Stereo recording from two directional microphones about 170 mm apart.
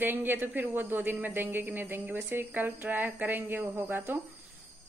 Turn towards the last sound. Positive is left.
turn(degrees=-10)  # may be behind; listen again after turning